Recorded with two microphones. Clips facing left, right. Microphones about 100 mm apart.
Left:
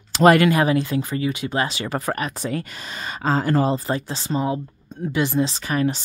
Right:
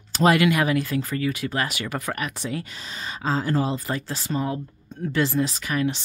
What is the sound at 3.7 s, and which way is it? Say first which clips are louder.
Speech: left 4 dB; 25° left (ahead or behind).